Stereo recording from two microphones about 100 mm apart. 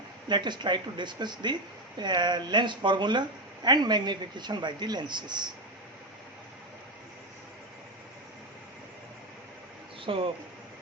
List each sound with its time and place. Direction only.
0.3 s speech: 50° right (ahead or behind)
10.1 s speech: 65° right (ahead or behind)